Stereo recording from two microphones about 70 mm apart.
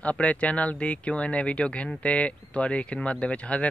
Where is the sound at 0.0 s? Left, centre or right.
Centre.